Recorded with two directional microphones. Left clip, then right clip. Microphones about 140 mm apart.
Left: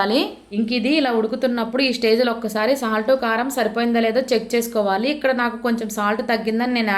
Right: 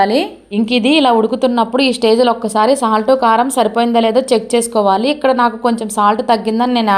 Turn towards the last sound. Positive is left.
turn(degrees=-50)  # may be behind; listen again after turning